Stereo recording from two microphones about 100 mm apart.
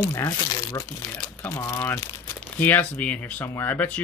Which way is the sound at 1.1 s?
25° left (ahead or behind).